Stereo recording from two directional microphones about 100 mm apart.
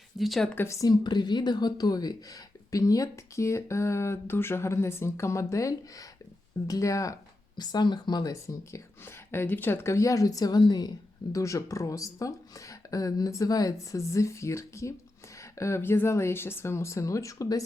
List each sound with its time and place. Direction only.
0.2 s speech: centre (ahead or behind)
0.5 s speech: 25° left (ahead or behind)
7.6 s speech: 45° left (ahead or behind)